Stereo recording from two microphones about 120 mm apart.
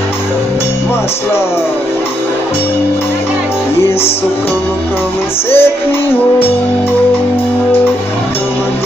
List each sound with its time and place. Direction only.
5.5 s music: 20° left (ahead or behind)